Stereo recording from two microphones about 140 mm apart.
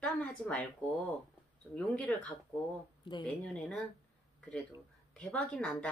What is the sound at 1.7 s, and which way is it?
Speech, 10° left (ahead or behind).